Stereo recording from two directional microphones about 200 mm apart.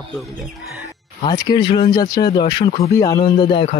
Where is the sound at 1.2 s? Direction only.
20° left (ahead or behind).